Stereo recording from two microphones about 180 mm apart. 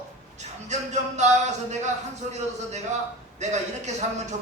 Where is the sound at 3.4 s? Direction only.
40° right (ahead or behind).